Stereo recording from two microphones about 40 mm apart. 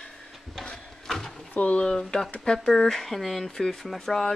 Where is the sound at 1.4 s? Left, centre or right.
Left.